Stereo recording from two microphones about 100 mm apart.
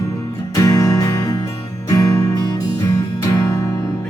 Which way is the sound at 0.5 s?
35° left (ahead or behind).